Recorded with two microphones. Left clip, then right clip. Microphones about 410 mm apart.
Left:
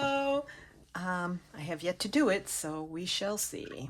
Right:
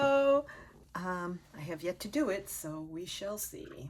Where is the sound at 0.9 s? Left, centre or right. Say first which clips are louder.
Left 3 dB; centre.